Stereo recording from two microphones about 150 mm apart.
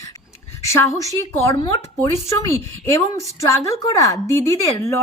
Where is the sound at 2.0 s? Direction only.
20° left (ahead or behind).